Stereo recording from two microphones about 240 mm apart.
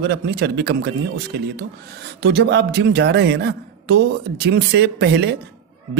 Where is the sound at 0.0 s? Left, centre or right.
Right.